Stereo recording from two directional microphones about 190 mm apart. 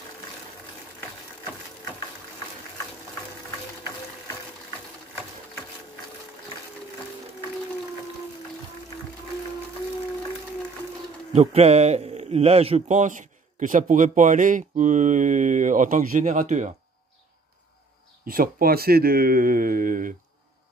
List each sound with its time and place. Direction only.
11.3 s a man's voice: 35° right (ahead or behind)
18.2 s speech: 50° right (ahead or behind)